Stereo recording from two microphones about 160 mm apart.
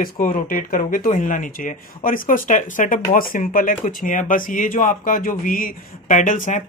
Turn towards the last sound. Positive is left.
turn(degrees=55)  # may be behind; listen again after turning